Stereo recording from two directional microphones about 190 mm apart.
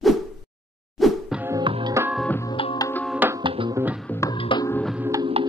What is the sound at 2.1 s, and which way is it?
Organ, 5° left (ahead or behind).